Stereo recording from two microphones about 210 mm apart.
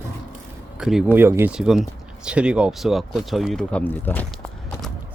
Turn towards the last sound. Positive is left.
turn(degrees=10)  # may be behind; listen again after turning